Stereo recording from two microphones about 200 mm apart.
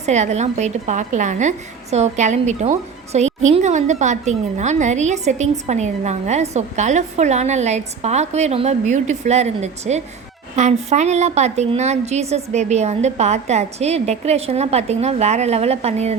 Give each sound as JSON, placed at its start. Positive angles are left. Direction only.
{"t": 0.0, "sound": "a woman's voice", "side_deg": -35}